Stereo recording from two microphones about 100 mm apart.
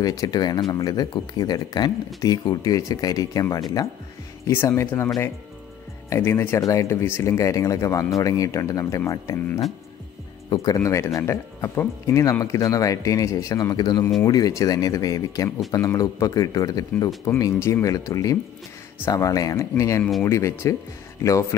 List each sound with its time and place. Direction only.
0.0 s speech: 35° left (ahead or behind)
4.5 s speech: 25° left (ahead or behind)
10.5 s speech: 35° left (ahead or behind)